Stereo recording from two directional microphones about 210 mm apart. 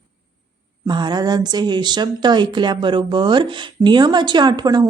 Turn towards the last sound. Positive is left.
turn(degrees=-20)  # may be behind; listen again after turning